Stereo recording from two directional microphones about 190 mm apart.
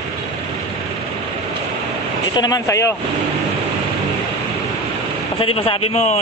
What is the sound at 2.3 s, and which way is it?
Speech, 20° left (ahead or behind).